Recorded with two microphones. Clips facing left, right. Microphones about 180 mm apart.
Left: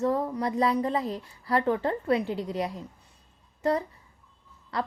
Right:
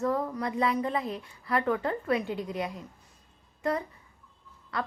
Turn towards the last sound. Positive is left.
turn(degrees=30)  # may be behind; listen again after turning